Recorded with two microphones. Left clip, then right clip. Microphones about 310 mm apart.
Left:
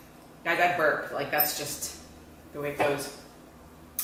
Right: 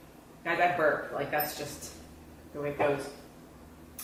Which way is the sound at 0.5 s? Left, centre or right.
Centre.